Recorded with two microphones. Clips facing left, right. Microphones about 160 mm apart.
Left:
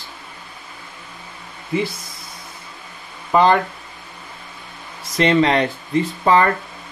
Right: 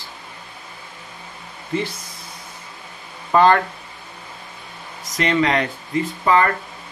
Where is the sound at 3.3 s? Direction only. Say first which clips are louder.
Even; 15° left (ahead or behind).